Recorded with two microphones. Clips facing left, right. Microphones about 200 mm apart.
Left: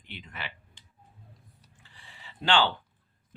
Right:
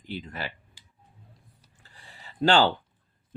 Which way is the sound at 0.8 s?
10° right (ahead or behind).